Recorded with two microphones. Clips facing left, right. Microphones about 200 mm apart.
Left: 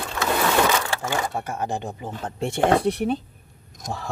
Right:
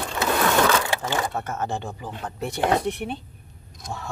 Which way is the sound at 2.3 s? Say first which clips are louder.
Left 3 dB; 25° left (ahead or behind).